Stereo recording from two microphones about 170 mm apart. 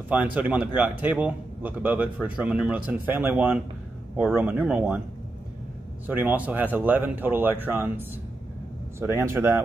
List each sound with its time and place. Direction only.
0.1 s speech: 10° right (ahead or behind)
6.0 s speech: 10° right (ahead or behind)
9.0 s speech: 15° right (ahead or behind)